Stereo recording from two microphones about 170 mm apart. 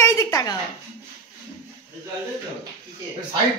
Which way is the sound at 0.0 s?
20° left (ahead or behind).